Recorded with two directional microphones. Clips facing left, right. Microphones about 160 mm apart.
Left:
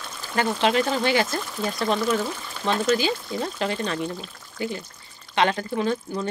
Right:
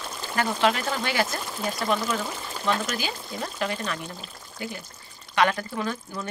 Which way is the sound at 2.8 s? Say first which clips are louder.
Left 9 dB; 25° left (ahead or behind).